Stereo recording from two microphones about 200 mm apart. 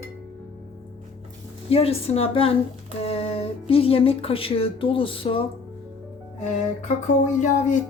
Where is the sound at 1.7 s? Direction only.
30° left (ahead or behind).